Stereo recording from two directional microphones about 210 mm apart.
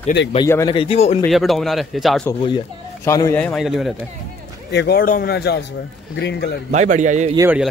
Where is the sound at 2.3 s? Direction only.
20° left (ahead or behind); by 3.9 s centre (ahead or behind).